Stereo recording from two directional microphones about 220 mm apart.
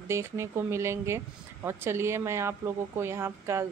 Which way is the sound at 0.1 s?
10° right (ahead or behind).